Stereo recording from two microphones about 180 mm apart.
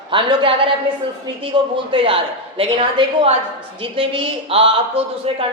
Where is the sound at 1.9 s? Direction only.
30° right (ahead or behind).